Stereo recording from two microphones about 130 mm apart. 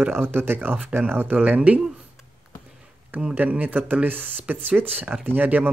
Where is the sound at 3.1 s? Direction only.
10° right (ahead or behind).